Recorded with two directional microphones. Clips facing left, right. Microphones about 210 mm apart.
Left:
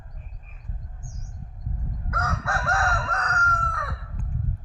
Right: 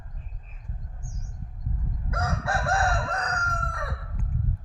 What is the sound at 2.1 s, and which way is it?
Crowing, 25° right (ahead or behind).